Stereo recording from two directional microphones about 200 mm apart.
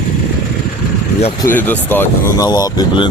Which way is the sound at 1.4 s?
10° left (ahead or behind).